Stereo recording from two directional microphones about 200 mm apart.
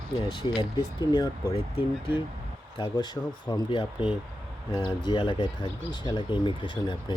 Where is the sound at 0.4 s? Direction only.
20° left (ahead or behind).